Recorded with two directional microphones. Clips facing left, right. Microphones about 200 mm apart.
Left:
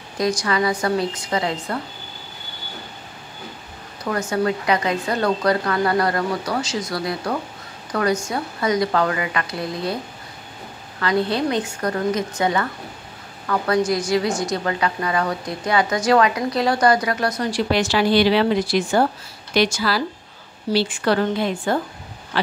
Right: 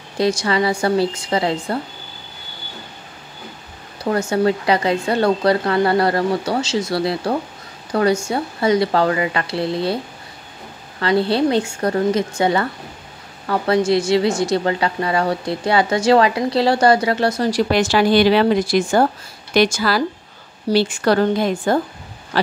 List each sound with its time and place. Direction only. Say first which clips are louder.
0.2 s a woman's voice: right 3 dB; 25° right (ahead or behind)
4.0 s a woman's voice: right 4 dB; 30° right (ahead or behind)
11.0 s a woman's voice: right 4 dB; 30° right (ahead or behind)